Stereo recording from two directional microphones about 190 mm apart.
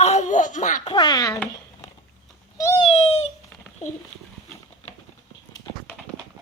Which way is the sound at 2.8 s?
35° left (ahead or behind).